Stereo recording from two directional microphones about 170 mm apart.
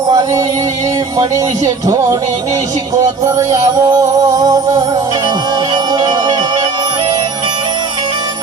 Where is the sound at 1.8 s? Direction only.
20° right (ahead or behind).